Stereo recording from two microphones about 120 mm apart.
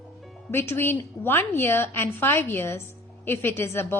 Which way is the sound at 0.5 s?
20° left (ahead or behind).